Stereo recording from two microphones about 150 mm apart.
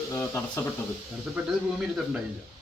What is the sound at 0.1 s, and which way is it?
Speech, 15° left (ahead or behind).